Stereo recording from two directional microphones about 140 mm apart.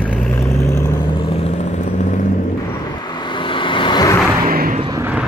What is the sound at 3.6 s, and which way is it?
Vehicle, 35° left (ahead or behind).